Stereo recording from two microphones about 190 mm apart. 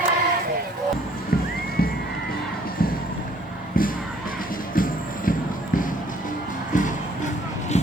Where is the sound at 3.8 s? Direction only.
50° left (ahead or behind).